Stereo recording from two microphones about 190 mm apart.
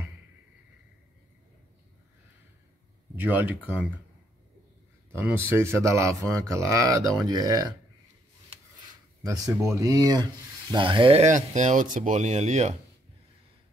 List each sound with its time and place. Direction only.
3.2 s speech: 10° right (ahead or behind)
5.1 s speech: 15° right (ahead or behind)
9.2 s speech: 15° right (ahead or behind); by 12.7 s 35° right (ahead or behind)